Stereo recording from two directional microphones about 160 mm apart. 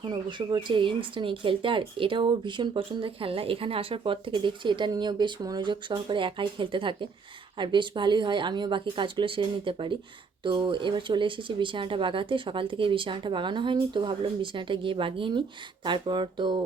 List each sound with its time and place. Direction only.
0.0 s speech: 30° right (ahead or behind)